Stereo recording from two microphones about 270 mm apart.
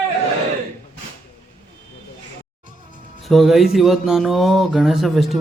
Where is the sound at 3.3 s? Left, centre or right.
Centre.